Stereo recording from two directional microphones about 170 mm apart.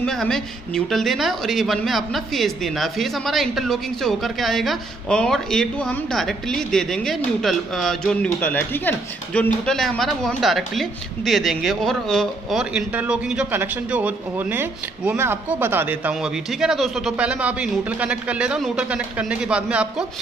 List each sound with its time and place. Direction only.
0.0 s speech: 5° left (ahead or behind)